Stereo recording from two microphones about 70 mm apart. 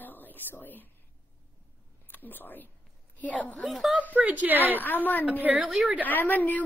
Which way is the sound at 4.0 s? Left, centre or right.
Right.